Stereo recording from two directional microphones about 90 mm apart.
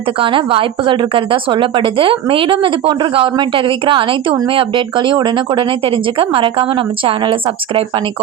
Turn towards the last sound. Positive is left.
turn(degrees=-75)  # may be behind; listen again after turning